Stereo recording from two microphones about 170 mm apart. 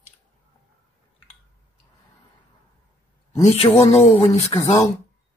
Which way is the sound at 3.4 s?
40° left (ahead or behind).